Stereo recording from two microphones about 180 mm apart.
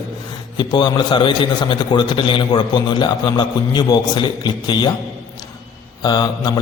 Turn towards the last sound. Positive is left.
turn(degrees=20)  # may be behind; listen again after turning